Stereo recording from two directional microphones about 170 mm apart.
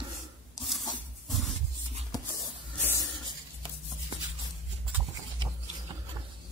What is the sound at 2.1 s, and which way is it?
Writing, 20° left (ahead or behind).